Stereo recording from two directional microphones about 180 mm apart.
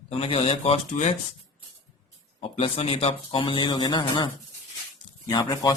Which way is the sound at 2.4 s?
30° left (ahead or behind).